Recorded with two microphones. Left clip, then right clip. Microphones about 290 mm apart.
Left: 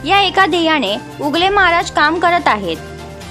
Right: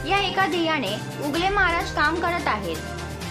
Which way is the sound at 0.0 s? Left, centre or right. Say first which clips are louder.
Left 10 dB; left.